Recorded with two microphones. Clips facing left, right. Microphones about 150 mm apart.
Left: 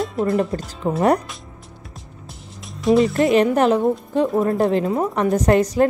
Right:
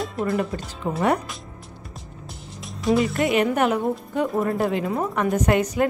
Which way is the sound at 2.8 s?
Centre (ahead or behind).